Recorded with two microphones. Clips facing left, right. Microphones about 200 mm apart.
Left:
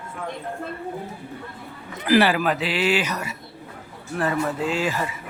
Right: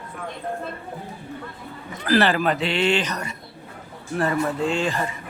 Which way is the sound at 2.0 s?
15° left (ahead or behind).